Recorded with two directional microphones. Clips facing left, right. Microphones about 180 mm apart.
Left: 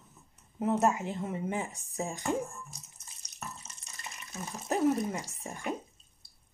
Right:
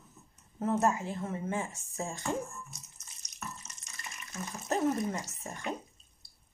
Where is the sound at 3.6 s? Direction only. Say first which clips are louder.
Left 1 dB; 30° left (ahead or behind).